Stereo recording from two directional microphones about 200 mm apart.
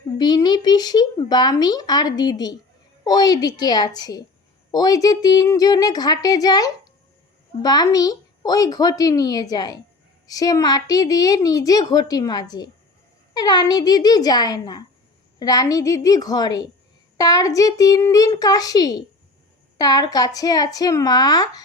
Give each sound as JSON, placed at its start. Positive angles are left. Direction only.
{"t": 0.2, "sound": "a woman's voice", "side_deg": 20}